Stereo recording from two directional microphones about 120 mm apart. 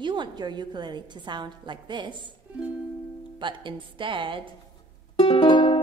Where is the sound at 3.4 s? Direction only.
40° right (ahead or behind).